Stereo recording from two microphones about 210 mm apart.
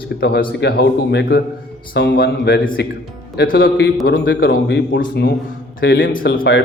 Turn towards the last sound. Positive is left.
turn(degrees=55)  # may be behind; listen again after turning